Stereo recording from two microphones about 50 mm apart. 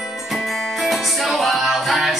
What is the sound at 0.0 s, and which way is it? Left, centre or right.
Music, centre.